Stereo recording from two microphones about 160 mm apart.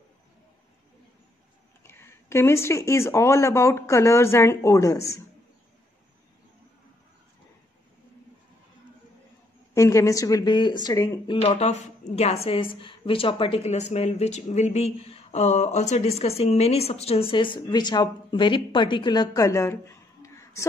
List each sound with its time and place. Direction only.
1.8 s speech: 15° left (ahead or behind)
9.8 s speech: 20° left (ahead or behind)
11.4 s a woman's voice: 40° left (ahead or behind); by 20.6 s 20° left (ahead or behind)